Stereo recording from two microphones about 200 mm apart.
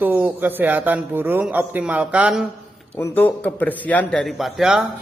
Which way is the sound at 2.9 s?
10° left (ahead or behind).